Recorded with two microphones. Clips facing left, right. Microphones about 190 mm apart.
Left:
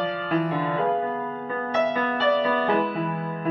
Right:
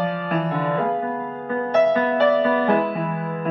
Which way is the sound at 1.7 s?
55° right (ahead or behind).